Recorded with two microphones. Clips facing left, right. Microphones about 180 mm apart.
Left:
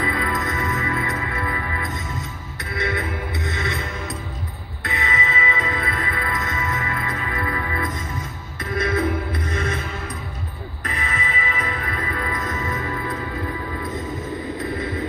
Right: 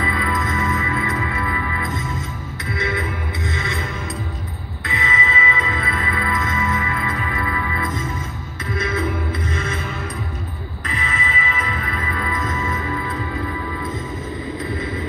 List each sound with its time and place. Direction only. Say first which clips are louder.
0.0 s music: right 1 dB; 50° left (ahead or behind)
4.8 s music: right 1 dB; 50° left (ahead or behind)
10.8 s music: right 1 dB; 45° left (ahead or behind)